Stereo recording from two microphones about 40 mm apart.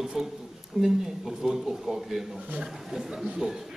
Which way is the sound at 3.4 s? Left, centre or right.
Right.